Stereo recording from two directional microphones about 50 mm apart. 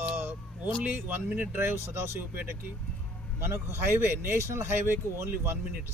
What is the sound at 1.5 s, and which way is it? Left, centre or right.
Speech, right.